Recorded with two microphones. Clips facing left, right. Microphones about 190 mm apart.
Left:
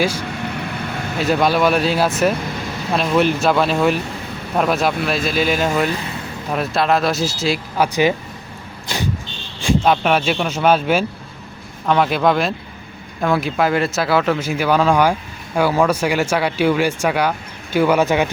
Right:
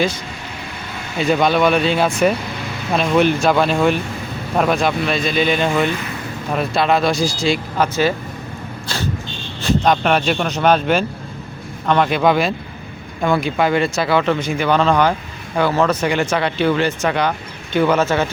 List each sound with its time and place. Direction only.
1.2 s speech: centre (ahead or behind)
8.9 s vehicle: 15° left (ahead or behind)
9.6 s speech: 10° left (ahead or behind)